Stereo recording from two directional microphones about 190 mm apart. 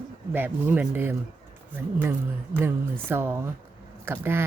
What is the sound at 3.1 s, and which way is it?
Speech, 10° right (ahead or behind).